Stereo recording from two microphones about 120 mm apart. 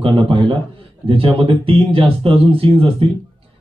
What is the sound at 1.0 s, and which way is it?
Speech, 50° right (ahead or behind).